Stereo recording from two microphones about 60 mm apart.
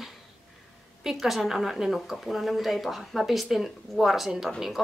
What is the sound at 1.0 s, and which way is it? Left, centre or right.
Speech, centre.